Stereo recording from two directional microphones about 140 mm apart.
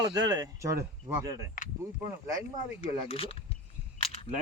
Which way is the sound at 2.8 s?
45° left (ahead or behind).